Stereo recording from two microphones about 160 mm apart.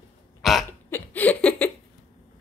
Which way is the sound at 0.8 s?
10° left (ahead or behind).